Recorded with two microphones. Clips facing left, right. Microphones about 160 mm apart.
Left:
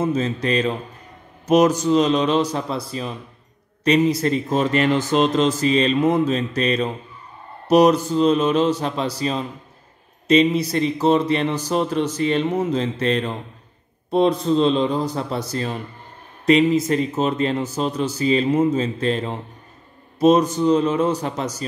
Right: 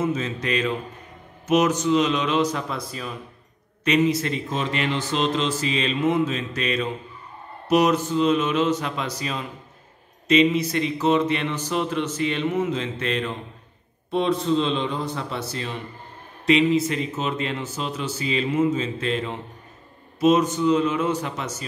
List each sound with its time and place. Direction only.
0.0 s speech: 35° left (ahead or behind)